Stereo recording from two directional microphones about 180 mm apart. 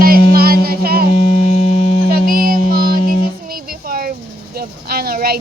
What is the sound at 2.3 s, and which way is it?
Music, 50° right (ahead or behind).